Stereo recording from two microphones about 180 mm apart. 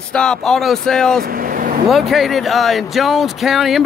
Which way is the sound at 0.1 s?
5° left (ahead or behind).